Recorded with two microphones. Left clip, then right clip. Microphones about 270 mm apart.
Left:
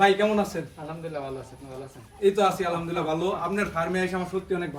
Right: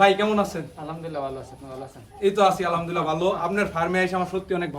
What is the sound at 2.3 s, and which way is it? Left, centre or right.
A man's voice, centre.